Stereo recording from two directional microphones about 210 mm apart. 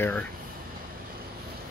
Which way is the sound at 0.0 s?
5° left (ahead or behind).